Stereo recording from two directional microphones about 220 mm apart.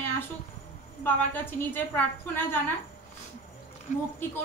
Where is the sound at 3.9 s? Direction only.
35° left (ahead or behind).